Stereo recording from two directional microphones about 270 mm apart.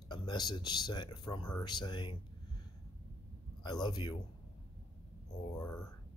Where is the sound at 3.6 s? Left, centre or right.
Centre.